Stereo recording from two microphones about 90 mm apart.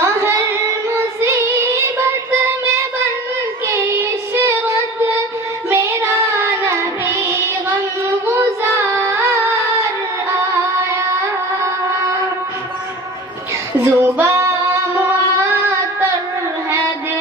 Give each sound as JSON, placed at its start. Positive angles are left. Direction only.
{"t": 0.0, "sound": "music", "side_deg": -30}
{"t": 3.7, "sound": "child singing", "side_deg": -30}
{"t": 13.8, "sound": "music", "side_deg": -30}